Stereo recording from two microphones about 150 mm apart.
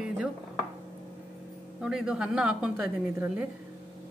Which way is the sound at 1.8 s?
5° right (ahead or behind).